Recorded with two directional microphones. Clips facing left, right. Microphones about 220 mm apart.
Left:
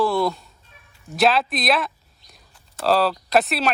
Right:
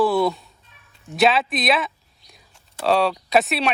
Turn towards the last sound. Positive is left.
turn(degrees=0)  # may be behind; listen again after turning